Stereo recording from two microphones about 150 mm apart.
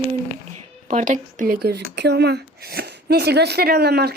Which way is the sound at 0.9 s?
60° right (ahead or behind).